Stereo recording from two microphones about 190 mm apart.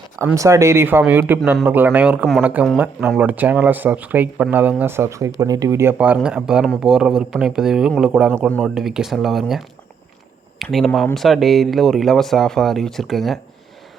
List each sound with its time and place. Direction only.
0.3 s speech: 15° right (ahead or behind); by 13.4 s centre (ahead or behind)